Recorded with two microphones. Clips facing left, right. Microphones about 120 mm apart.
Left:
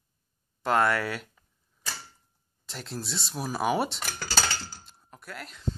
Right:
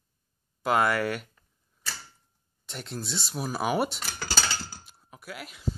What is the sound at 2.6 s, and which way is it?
Speech, centre (ahead or behind).